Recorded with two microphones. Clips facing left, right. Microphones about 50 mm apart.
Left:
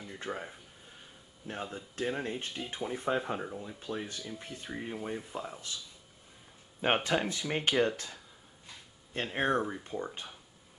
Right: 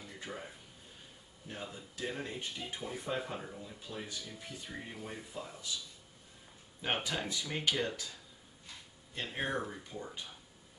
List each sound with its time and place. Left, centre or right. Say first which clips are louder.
0.3 s speech: left 7 dB; left
1.5 s speech: left 5 dB; left
6.8 s speech: left 7 dB; left
9.6 s speech: left 6 dB; left